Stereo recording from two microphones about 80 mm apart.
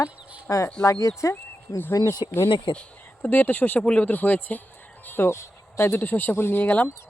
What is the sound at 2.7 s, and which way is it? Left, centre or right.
Speech, left.